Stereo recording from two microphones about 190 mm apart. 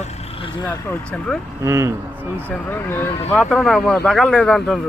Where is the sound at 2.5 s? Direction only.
10° left (ahead or behind).